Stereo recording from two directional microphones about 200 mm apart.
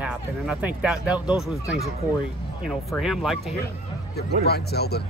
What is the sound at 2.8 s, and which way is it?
Speech, centre (ahead or behind).